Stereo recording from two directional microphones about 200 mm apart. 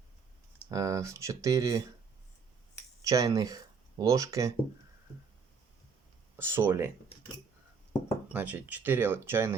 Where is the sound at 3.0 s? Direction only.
15° right (ahead or behind).